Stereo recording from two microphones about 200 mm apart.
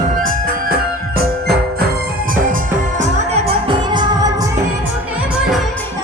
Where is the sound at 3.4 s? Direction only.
25° right (ahead or behind).